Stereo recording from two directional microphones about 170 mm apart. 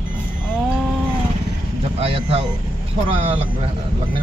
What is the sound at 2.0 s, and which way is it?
Speech, 35° right (ahead or behind).